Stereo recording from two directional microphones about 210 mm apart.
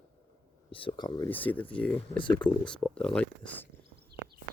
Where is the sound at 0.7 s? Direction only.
25° left (ahead or behind).